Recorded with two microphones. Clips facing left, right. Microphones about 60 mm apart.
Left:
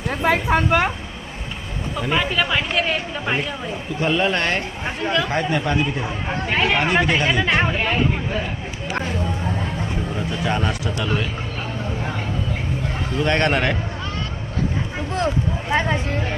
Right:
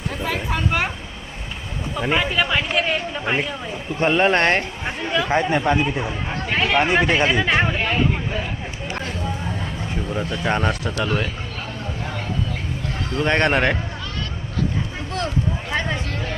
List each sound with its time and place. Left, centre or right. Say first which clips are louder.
0.1 s a sound: left 8 dB; left
0.5 s speech: left 3 dB; left
2.1 s speech: even; centre
4.0 s speech: right 3 dB; right
5.3 s speech: right 2 dB; centre
6.1 s speech: left 1 dB; centre
6.7 s speech: right 5 dB; centre
10.4 s speech: right 1 dB; right
13.2 s speech: right 1 dB; right
15.7 s speech: left 6 dB; left